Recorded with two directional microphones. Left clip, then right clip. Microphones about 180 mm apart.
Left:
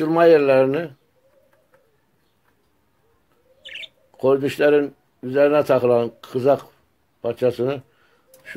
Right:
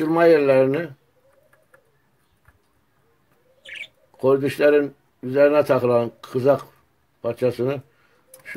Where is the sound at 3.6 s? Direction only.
5° right (ahead or behind).